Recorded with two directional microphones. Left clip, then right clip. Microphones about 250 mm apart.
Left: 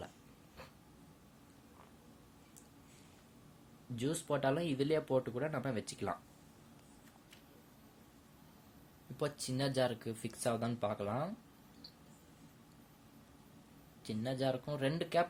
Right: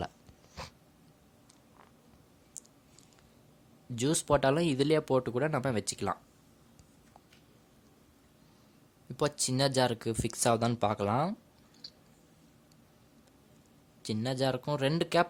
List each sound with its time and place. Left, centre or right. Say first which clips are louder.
3.9 s speech: right 9 dB; right
9.1 s speech: right 8 dB; right
14.0 s speech: right 6 dB; right